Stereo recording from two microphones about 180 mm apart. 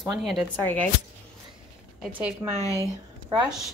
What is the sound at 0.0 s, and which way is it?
Speech, centre (ahead or behind).